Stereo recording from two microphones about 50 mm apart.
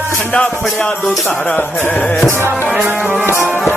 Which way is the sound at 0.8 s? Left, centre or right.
Centre.